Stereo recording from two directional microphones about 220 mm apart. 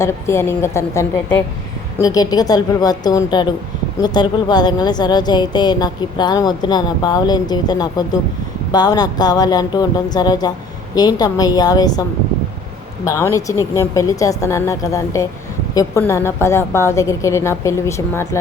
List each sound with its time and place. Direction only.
0.0 s a woman's voice: 10° left (ahead or behind)
13.1 s a woman's voice: 15° left (ahead or behind)